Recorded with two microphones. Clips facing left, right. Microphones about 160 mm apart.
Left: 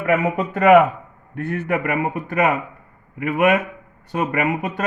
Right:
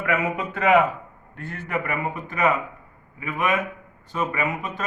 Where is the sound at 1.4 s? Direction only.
65° left (ahead or behind).